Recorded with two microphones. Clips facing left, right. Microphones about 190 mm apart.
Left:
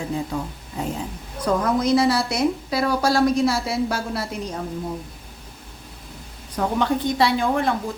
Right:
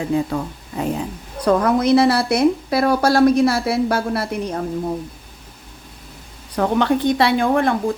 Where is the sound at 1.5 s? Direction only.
60° right (ahead or behind).